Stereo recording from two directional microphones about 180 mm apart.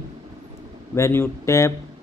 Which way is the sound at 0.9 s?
15° left (ahead or behind).